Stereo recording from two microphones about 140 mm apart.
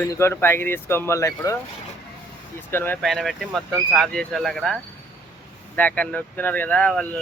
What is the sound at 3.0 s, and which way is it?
Speech, centre (ahead or behind).